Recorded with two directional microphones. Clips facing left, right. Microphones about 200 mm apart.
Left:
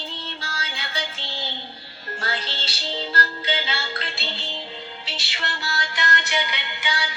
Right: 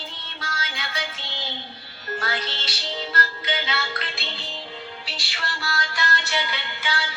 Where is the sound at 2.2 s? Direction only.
30° left (ahead or behind).